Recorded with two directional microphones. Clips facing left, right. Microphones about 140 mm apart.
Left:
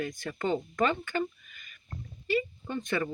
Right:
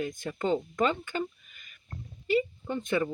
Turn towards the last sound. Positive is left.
turn(degrees=-15)  # may be behind; listen again after turning